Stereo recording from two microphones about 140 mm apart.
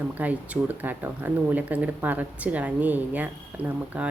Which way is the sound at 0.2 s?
10° right (ahead or behind).